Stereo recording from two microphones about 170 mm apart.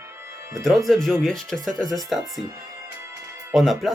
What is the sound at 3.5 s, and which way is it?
Speech, centre (ahead or behind).